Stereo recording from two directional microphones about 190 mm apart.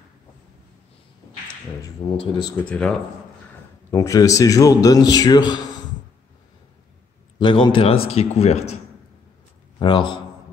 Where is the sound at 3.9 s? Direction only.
15° left (ahead or behind).